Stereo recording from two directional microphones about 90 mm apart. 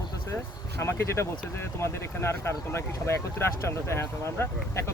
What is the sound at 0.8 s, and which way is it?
Speech, 30° left (ahead or behind).